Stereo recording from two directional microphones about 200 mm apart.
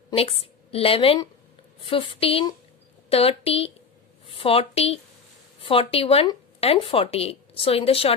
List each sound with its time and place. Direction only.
0.1 s a woman's voice: 30° left (ahead or behind)